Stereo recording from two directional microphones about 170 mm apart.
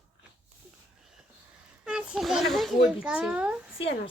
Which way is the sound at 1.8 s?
5° right (ahead or behind).